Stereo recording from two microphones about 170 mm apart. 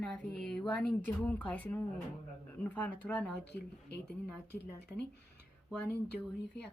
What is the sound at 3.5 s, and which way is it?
Speech, 80° left.